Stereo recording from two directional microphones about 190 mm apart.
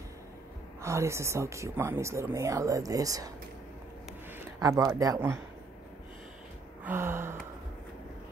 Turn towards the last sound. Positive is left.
turn(degrees=-15)  # may be behind; listen again after turning